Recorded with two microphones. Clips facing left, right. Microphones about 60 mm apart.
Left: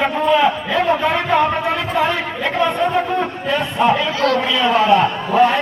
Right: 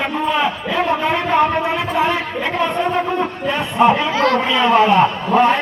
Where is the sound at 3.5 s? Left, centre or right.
Right.